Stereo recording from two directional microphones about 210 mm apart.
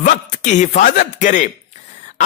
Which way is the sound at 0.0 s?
35° left (ahead or behind).